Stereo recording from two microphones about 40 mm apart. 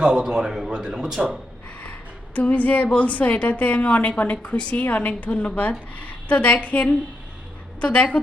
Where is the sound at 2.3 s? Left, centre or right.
Left.